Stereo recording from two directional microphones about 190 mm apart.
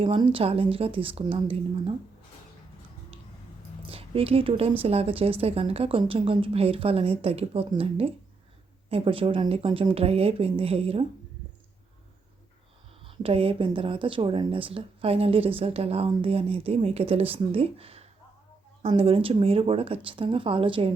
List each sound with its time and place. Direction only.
0.0 s speech: 30° right (ahead or behind)
3.8 s a woman's voice: 30° right (ahead or behind)
13.1 s speech: 30° right (ahead or behind)